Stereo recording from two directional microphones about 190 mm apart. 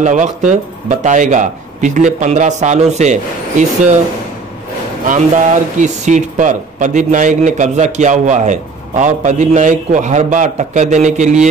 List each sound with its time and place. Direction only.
0.0 s speech: 40° right (ahead or behind)
5.0 s speech: 40° right (ahead or behind)